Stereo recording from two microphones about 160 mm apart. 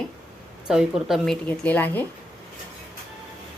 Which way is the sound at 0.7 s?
5° right (ahead or behind).